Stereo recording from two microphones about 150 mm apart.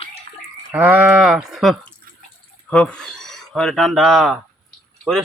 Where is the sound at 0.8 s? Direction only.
5° right (ahead or behind).